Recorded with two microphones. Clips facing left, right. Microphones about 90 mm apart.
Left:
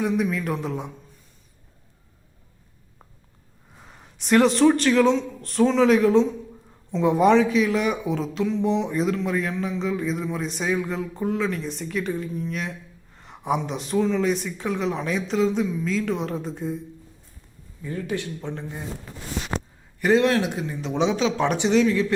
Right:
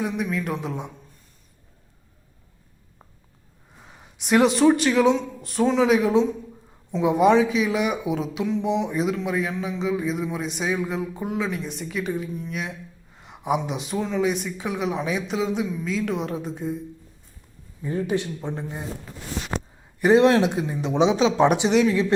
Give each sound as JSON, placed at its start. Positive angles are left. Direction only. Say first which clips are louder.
{"t": 0.0, "sound": "speech", "louder": "left 2 dB", "side_deg": 0}
{"t": 3.8, "sound": "speech", "louder": "even", "side_deg": 0}
{"t": 17.8, "sound": "speech", "louder": "right 4 dB", "side_deg": -25}
{"t": 20.0, "sound": "speech", "louder": "right 3 dB", "side_deg": -20}